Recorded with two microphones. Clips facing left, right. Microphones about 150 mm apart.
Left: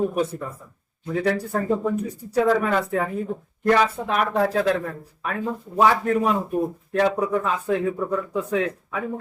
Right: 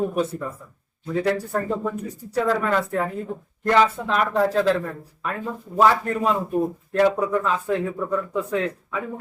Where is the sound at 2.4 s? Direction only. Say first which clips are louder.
Left 1 dB; 10° left (ahead or behind).